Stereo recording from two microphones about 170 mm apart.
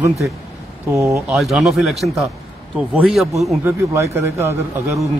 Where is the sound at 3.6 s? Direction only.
15° right (ahead or behind).